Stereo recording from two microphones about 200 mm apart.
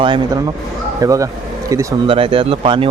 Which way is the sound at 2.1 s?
25° right (ahead or behind).